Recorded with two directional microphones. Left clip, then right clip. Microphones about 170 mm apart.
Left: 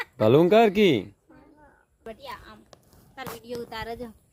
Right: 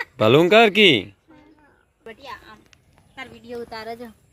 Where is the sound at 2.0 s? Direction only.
30° right (ahead or behind); by 4.1 s 15° right (ahead or behind).